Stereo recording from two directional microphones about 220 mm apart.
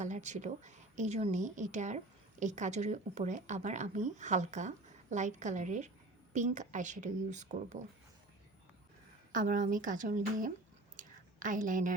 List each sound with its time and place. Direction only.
0.0 s a woman's voice: 35° right (ahead or behind)
9.3 s a woman's voice: 35° right (ahead or behind)
10.9 s a sound: 35° right (ahead or behind)